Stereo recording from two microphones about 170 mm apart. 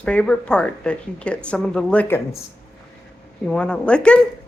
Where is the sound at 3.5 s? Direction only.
5° left (ahead or behind).